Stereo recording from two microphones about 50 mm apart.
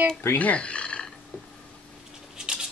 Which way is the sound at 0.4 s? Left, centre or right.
Left.